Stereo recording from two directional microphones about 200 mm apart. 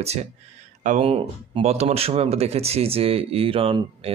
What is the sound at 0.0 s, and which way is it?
Speech, 30° right (ahead or behind).